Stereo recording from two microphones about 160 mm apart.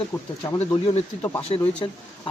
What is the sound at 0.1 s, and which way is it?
Speech, 25° left (ahead or behind).